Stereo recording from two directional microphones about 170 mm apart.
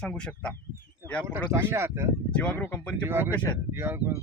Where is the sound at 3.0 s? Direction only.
15° right (ahead or behind).